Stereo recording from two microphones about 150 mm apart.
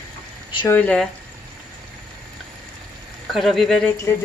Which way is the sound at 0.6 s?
10° left (ahead or behind).